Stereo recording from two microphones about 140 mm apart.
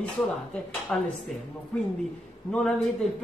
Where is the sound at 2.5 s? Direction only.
Centre (ahead or behind).